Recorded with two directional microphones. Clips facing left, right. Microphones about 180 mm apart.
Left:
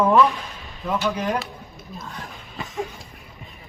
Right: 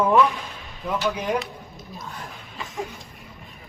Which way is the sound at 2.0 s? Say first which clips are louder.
Left 1 dB; centre (ahead or behind).